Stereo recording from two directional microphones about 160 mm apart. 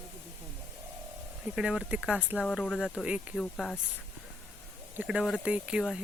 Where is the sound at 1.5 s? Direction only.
5° right (ahead or behind).